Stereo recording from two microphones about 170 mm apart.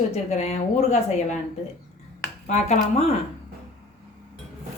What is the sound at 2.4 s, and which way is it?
Speech, 40° left (ahead or behind).